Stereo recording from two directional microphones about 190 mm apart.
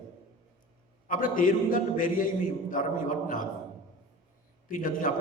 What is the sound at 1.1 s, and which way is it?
A man's voice, 45° left (ahead or behind).